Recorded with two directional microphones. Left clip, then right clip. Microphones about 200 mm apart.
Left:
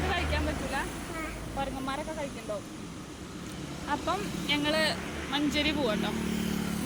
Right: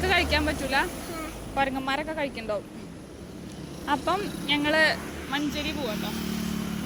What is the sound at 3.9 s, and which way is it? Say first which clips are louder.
Speech: right 5 dB; 25° right (ahead or behind).